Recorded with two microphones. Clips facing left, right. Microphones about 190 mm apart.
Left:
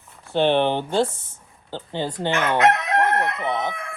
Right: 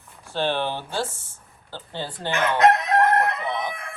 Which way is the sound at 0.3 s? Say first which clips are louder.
Left 6 dB; 20° left (ahead or behind).